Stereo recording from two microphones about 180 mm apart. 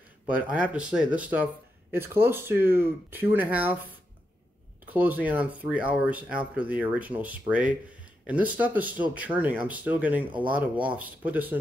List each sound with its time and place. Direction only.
0.3 s speech: 10° right (ahead or behind)
4.9 s speech: 10° right (ahead or behind)